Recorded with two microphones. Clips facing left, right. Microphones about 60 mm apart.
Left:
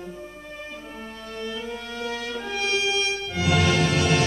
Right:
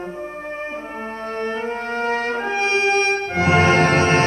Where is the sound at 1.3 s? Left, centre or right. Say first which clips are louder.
Right 7 dB; right.